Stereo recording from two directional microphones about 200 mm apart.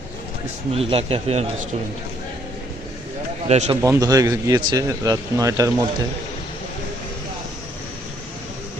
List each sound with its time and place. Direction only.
0.7 s speech: 30° right (ahead or behind)
3.4 s speech: 30° right (ahead or behind)
3.8 s a man's voice: 15° right (ahead or behind)